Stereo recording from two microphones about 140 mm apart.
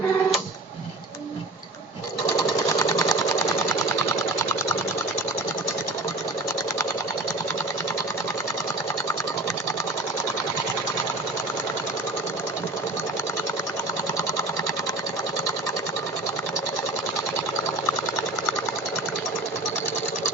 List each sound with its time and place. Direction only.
2.7 s sewing machine: 25° left (ahead or behind)